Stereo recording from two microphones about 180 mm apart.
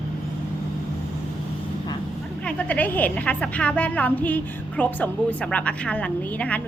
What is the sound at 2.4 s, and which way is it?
A woman's voice, 10° left (ahead or behind).